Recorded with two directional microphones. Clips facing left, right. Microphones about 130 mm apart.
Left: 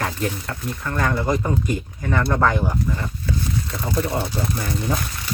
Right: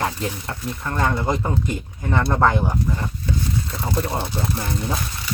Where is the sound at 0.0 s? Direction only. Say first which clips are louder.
Even; 25° right (ahead or behind).